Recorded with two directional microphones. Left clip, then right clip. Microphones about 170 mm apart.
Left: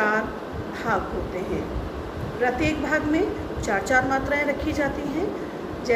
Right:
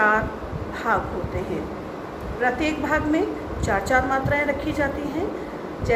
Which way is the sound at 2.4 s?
15° right (ahead or behind).